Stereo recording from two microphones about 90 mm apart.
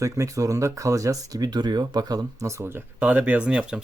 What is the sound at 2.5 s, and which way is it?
Speech, 30° right (ahead or behind).